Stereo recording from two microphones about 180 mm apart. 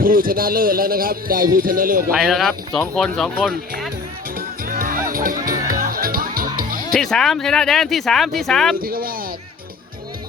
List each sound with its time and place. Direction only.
0.0 s a man's voice: 50° right (ahead or behind)
2.1 s speech: centre (ahead or behind)
4.4 s music: 50° right (ahead or behind)
6.9 s speech: centre (ahead or behind)
8.8 s a man's voice: 55° right (ahead or behind)